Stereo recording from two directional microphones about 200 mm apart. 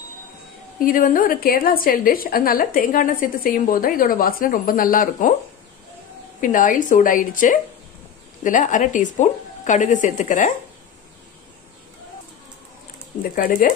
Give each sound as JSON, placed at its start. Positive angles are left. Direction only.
{"t": 0.7, "sound": "a woman's voice", "side_deg": 45}
{"t": 6.4, "sound": "a woman's voice", "side_deg": 40}
{"t": 13.4, "sound": "a woman's voice", "side_deg": 45}